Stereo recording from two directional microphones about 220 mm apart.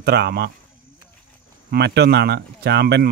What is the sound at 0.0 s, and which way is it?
Speech, 50° right (ahead or behind).